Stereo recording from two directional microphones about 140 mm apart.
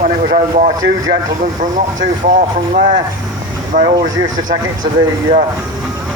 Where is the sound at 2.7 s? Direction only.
70° right (ahead or behind).